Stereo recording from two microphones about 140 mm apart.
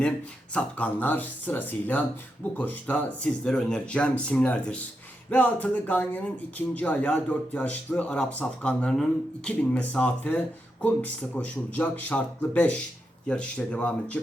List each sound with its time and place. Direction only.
0.5 s speech: 10° left (ahead or behind)